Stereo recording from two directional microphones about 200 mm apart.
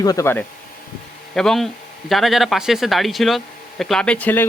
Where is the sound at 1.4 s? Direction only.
Centre (ahead or behind).